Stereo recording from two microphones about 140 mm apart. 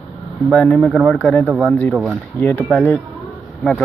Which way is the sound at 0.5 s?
10° left (ahead or behind).